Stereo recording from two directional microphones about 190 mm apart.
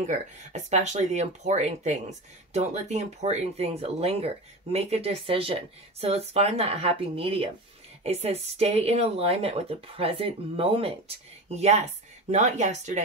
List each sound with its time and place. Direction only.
0.0 s speech: 35° right (ahead or behind)